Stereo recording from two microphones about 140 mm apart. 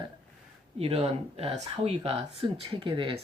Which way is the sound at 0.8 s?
50° right (ahead or behind).